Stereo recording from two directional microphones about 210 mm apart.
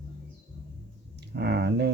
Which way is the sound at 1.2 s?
55° right (ahead or behind).